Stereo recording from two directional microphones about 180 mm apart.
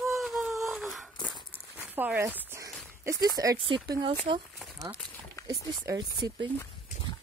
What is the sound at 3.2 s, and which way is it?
Speech, 20° right (ahead or behind).